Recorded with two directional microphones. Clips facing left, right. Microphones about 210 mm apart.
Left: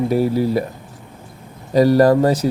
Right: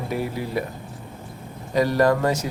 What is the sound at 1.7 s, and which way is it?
Speech, 35° left (ahead or behind).